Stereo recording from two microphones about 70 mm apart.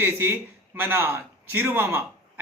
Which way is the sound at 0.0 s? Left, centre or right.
Right.